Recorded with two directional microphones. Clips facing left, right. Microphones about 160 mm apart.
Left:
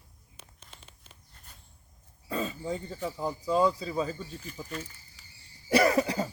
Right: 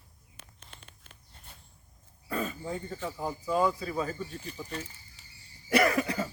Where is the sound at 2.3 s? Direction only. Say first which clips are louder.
Left 1 dB; 25° left (ahead or behind).